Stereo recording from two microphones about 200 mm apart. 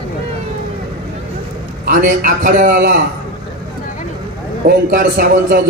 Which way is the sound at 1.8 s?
45° right (ahead or behind).